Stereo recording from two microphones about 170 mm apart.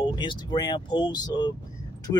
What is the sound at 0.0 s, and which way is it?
Speech, 30° left (ahead or behind).